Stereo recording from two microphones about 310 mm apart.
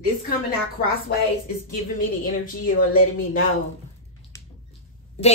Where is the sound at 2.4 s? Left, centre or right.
Left.